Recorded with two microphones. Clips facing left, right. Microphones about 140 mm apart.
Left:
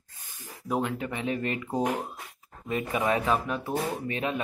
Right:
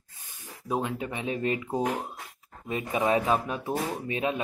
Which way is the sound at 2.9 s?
25° right (ahead or behind).